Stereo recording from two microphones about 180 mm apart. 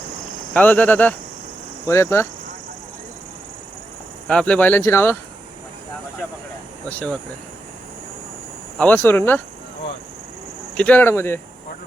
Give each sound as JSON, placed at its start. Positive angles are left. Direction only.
{"t": 0.5, "sound": "speech", "side_deg": 10}
{"t": 4.3, "sound": "speech", "side_deg": 5}
{"t": 6.8, "sound": "speech", "side_deg": 10}
{"t": 8.8, "sound": "speech", "side_deg": 10}
{"t": 10.8, "sound": "speech", "side_deg": 10}